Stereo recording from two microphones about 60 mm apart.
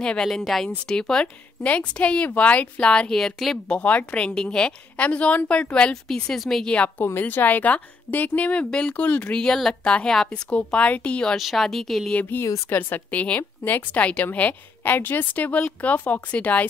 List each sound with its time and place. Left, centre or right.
0.0 s a woman's voice: centre
0.3 s a woman's voice: centre
3.6 s a woman's voice: centre
7.1 s a woman's voice: left
9.3 s a woman's voice: centre
11.3 s speech: centre
12.3 s a woman's voice: left